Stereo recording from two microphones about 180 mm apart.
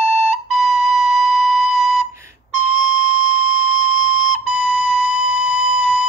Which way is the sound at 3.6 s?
45° left (ahead or behind).